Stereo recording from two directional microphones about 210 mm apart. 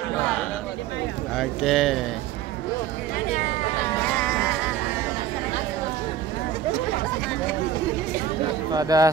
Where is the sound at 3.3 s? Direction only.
35° left (ahead or behind).